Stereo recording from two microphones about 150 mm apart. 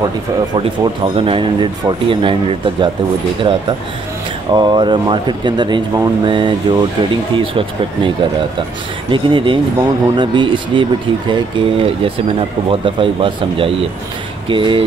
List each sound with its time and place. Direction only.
0.6 s speech: 40° right (ahead or behind)
9.1 s speech: 35° right (ahead or behind)